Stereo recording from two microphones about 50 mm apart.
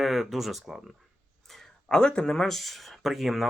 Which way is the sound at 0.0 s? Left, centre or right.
Centre.